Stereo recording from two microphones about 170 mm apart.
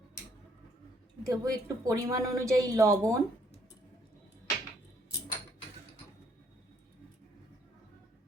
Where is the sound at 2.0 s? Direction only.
20° right (ahead or behind).